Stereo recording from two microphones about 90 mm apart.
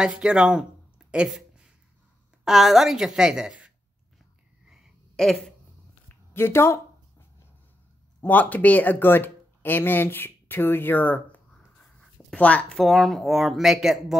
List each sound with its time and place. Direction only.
0.0 s speech: 10° right (ahead or behind)
5.1 s speech: 5° left (ahead or behind)
6.3 s a sound: 25° left (ahead or behind)
8.2 s speech: 15° left (ahead or behind)
12.0 s writing: 10° left (ahead or behind)
12.7 s speech: centre (ahead or behind)